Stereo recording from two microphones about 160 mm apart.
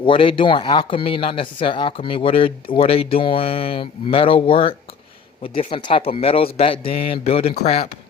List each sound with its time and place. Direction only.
0.0 s speech: 35° left (ahead or behind)